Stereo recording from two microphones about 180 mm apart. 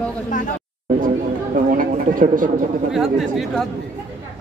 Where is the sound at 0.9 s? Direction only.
50° right (ahead or behind).